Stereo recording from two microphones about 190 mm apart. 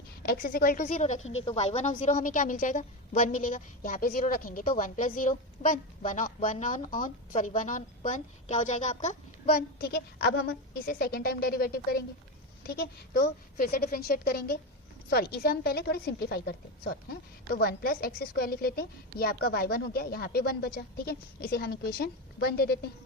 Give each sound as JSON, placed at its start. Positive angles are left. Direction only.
{"t": 0.2, "sound": "a woman's voice", "side_deg": 50}
{"t": 9.6, "sound": "a woman's voice", "side_deg": 55}